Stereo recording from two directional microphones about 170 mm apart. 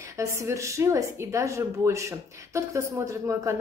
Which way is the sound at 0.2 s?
15° right (ahead or behind).